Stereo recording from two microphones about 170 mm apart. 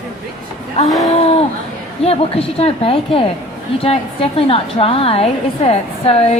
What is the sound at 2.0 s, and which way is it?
A woman's voice, 35° left (ahead or behind).